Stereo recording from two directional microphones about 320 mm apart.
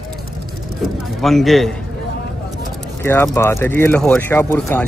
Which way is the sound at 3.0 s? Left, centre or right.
Centre.